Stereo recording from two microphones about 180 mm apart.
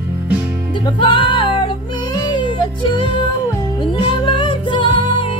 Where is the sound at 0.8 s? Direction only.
25° left (ahead or behind).